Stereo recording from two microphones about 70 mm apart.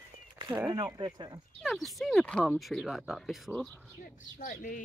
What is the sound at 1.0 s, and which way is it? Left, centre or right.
Speech, right.